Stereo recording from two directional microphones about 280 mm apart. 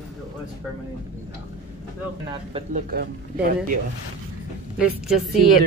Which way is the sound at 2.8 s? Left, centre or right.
Right.